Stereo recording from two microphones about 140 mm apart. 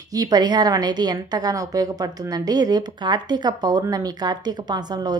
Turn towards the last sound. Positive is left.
turn(degrees=-30)  # may be behind; listen again after turning